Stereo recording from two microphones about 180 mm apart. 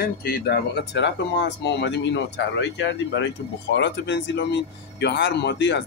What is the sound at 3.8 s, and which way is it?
Speech, 75° left (ahead or behind).